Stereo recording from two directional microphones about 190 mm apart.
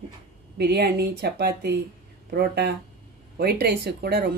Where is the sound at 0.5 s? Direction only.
60° right (ahead or behind).